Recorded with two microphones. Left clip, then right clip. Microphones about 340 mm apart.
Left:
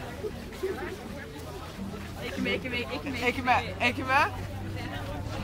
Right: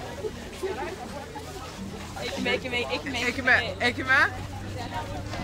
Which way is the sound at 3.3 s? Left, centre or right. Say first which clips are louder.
Right 3 dB; centre.